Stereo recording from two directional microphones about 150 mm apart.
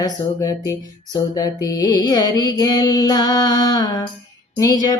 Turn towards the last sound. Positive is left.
turn(degrees=25)  # may be behind; listen again after turning